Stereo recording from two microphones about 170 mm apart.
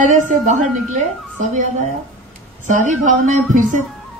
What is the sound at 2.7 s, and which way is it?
A woman's voice, 50° right (ahead or behind).